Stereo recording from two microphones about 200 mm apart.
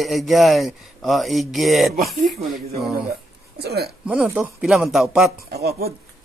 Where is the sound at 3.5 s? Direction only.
55° right (ahead or behind).